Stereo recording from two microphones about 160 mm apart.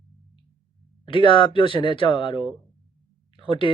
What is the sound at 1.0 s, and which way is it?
Speech, 30° left (ahead or behind).